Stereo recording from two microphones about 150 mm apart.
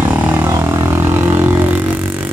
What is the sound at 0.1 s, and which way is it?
Vehicle, 15° right (ahead or behind).